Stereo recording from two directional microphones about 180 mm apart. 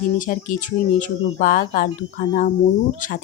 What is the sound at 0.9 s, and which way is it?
Speech, 45° left (ahead or behind).